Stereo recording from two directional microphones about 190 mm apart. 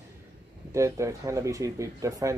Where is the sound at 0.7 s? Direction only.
15° right (ahead or behind).